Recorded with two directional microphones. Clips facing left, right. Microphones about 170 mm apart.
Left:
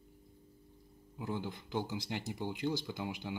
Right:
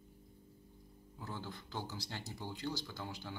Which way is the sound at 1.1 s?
15° left (ahead or behind).